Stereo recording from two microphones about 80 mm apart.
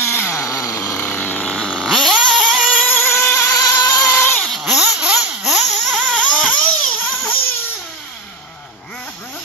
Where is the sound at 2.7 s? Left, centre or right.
Left.